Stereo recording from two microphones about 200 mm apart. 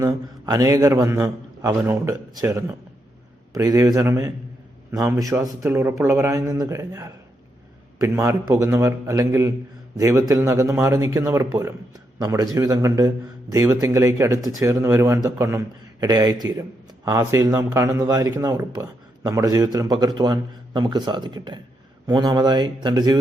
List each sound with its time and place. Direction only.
0.0 s speech: 15° right (ahead or behind)